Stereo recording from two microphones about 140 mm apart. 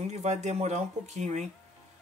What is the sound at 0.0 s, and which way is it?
Speech, 55° right (ahead or behind).